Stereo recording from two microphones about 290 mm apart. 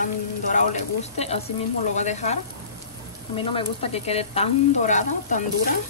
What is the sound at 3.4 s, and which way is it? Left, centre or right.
Speech, centre.